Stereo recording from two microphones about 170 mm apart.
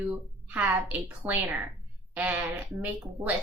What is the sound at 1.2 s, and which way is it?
A woman's voice, 10° right (ahead or behind).